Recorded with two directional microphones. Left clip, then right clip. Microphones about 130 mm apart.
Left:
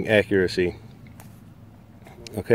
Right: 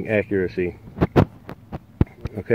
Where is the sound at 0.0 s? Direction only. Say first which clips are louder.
Left 2 dB; 20° left (ahead or behind).